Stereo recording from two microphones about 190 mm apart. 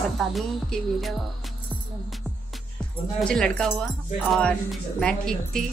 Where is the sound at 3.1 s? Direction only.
5° left (ahead or behind).